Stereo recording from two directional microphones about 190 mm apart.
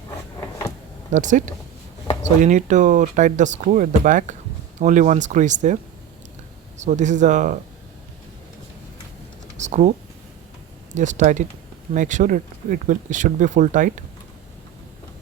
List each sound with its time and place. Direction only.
1.1 s speech: 40° right (ahead or behind)
9.6 s typing: 40° right (ahead or behind)
10.9 s speech: 40° right (ahead or behind)